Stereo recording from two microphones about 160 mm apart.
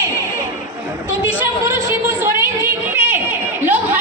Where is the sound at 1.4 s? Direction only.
15° right (ahead or behind).